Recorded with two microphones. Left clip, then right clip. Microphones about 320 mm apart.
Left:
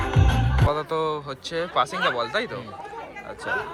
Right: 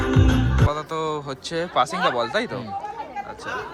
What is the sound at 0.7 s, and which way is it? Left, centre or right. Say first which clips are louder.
Speech: left 1 dB; centre.